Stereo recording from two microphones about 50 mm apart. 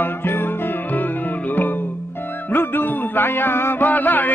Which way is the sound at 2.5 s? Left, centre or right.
Left.